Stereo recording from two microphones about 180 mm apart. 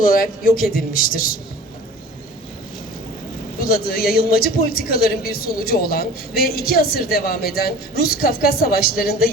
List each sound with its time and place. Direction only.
0.0 s a man's voice: 50° left (ahead or behind)
3.6 s a man's voice: 55° left (ahead or behind)